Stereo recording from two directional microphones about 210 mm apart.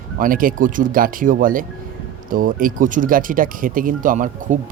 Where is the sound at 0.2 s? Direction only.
40° right (ahead or behind).